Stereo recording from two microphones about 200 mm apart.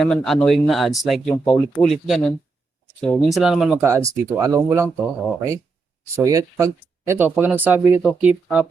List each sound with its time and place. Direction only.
0.0 s speech: centre (ahead or behind); by 4.9 s 15° right (ahead or behind)
6.2 s speech: 15° right (ahead or behind)